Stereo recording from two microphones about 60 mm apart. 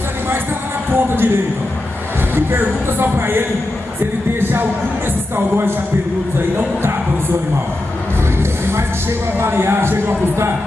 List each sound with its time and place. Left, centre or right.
0.9 s speech: right
9.4 s speech: right